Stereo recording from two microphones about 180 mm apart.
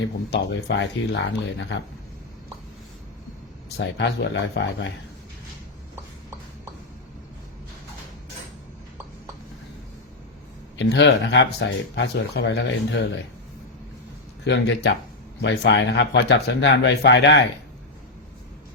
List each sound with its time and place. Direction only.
0.0 s speech: 80° left
3.8 s speech: 75° left (ahead or behind)
10.8 s speech: 80° left
14.4 s speech: 80° left